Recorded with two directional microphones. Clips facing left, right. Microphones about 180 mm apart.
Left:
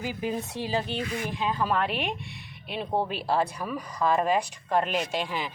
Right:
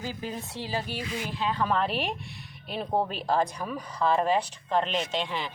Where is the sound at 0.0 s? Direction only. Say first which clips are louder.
Left 4 dB; 15° left (ahead or behind).